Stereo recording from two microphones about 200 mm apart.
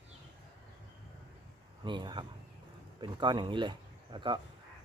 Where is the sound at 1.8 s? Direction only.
20° right (ahead or behind).